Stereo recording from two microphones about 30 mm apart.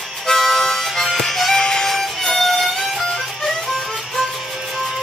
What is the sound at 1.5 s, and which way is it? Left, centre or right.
Music, left.